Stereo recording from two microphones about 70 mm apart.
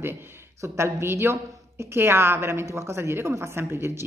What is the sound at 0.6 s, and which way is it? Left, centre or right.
A woman's voice, right.